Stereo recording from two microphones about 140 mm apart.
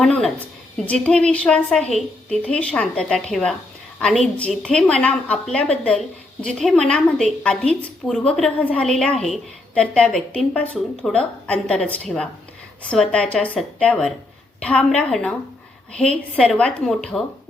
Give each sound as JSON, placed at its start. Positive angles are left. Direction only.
{"t": 0.0, "sound": "a woman's voice", "side_deg": 0}